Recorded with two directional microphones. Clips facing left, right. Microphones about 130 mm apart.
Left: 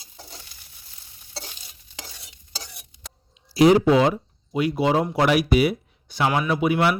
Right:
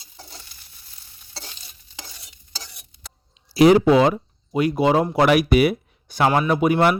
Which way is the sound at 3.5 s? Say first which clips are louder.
Right 2 dB; 70° right (ahead or behind).